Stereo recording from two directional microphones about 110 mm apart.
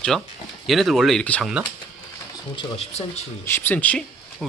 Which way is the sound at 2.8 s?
80° left.